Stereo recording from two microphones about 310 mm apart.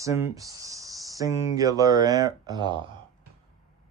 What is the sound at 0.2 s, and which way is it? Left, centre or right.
Speech, centre.